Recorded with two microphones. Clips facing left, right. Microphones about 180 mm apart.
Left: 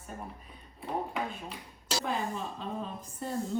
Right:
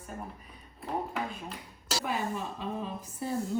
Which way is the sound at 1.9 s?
5° right (ahead or behind).